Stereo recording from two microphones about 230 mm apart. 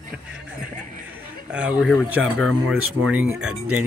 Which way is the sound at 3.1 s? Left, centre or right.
Centre.